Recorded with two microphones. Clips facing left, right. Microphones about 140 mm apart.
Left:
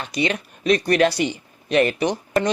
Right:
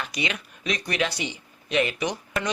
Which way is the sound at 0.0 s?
30° left (ahead or behind).